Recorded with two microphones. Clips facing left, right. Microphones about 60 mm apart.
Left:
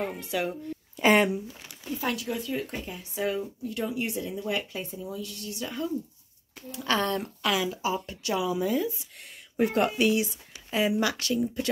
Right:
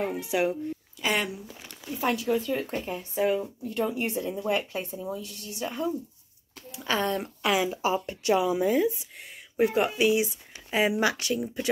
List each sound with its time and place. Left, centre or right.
0.0 s speech: centre
0.9 s speech: left
2.0 s speech: right
2.2 s speech: right
6.7 s speech: centre; by 8.9 s right
9.6 s speech: centre
10.2 s speech: right